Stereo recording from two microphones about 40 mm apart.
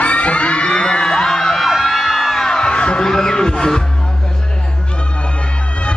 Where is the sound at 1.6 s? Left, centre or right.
Centre.